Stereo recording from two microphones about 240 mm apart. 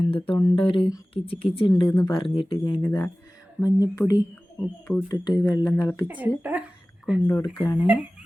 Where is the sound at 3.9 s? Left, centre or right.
Centre.